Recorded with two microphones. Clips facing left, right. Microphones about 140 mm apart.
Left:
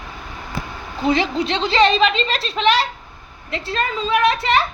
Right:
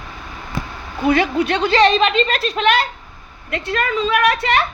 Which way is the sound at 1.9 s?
45° right (ahead or behind).